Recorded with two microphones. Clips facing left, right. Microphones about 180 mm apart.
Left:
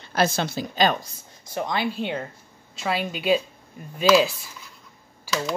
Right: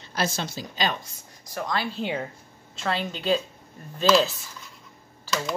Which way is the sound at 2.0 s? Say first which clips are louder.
Left 1 dB; 5° right (ahead or behind).